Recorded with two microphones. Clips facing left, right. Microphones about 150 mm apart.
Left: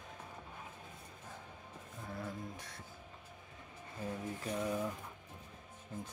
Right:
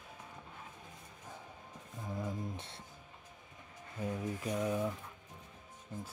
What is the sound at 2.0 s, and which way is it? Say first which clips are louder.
Music: right 4 dB; 20° right (ahead or behind).